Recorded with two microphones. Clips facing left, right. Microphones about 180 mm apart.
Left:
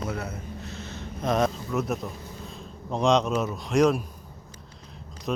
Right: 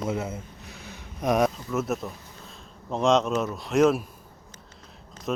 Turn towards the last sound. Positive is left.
turn(degrees=0)  # may be behind; listen again after turning